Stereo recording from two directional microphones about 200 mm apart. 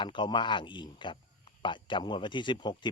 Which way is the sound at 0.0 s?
25° left (ahead or behind).